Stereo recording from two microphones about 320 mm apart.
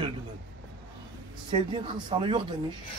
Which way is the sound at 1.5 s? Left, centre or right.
Centre.